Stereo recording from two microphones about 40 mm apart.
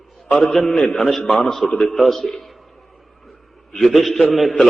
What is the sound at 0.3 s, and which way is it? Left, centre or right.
Speech, left.